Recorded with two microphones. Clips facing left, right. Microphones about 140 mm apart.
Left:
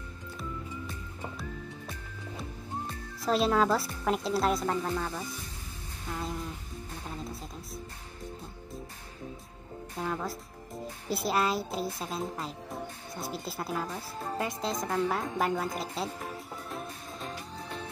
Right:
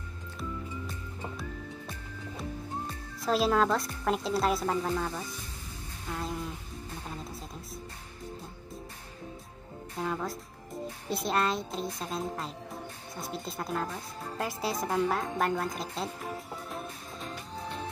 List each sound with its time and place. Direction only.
3.2 s a woman's voice: centre (ahead or behind)
9.9 s a woman's voice: centre (ahead or behind)
14.4 s a woman's voice: 5° right (ahead or behind)